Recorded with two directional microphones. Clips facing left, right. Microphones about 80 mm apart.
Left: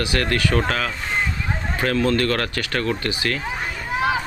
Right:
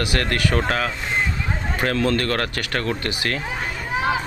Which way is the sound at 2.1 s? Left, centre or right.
Right.